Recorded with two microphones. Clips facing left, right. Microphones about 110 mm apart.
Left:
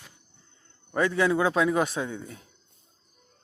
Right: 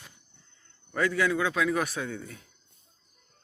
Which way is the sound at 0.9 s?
25° left (ahead or behind).